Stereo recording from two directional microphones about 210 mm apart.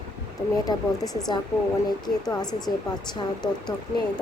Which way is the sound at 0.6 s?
20° left (ahead or behind).